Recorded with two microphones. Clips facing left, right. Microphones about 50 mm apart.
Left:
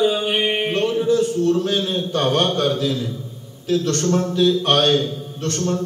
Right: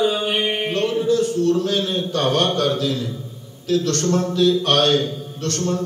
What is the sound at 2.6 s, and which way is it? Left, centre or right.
A man's voice, centre.